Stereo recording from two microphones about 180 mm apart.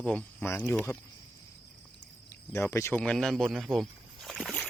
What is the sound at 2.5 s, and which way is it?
Speech, 15° left (ahead or behind).